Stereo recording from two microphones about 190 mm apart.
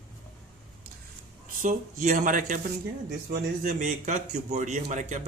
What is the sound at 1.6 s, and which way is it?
A man's voice, 45° right (ahead or behind).